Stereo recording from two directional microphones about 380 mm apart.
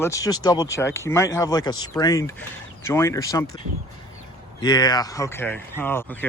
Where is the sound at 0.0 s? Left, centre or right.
Centre.